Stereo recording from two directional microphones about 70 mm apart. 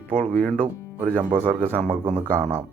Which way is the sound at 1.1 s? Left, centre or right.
Right.